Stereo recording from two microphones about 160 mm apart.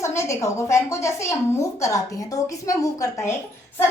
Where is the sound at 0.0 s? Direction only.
20° left (ahead or behind).